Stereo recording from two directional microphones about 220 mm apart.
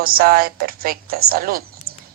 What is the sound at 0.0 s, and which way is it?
A woman's voice, 40° right (ahead or behind).